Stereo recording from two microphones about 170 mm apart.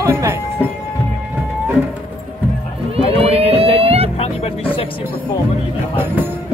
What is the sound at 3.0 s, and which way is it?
Music, 35° right (ahead or behind).